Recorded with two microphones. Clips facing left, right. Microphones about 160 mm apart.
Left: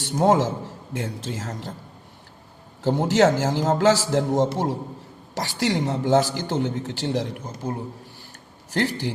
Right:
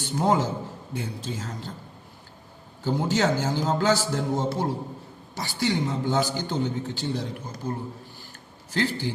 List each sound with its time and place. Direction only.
0.0 s a man's voice: 90° left
3.0 s a man's voice: 90° left
8.7 s a man's voice: 75° left (ahead or behind)